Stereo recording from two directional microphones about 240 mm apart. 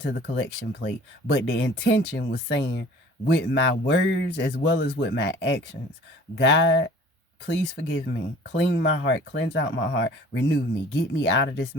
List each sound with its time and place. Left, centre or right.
0.7 s speech: left